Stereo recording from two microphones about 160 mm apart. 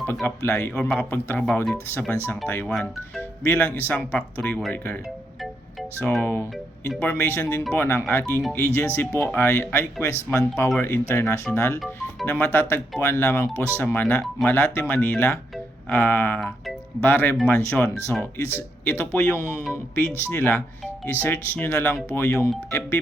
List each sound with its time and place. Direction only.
0.0 s speech: 10° left (ahead or behind)
0.7 s speech: 5° left (ahead or behind)
6.2 s speech: 15° left (ahead or behind)
8.2 s speech: centre (ahead or behind)
8.6 s speech: 15° left (ahead or behind)